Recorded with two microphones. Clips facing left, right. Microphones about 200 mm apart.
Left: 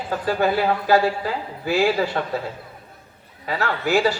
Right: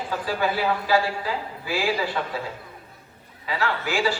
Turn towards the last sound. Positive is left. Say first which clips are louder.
# left 5 dB
turn(degrees=40)  # may be behind; listen again after turning